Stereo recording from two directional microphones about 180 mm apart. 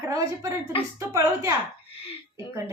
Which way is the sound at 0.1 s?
15° right (ahead or behind).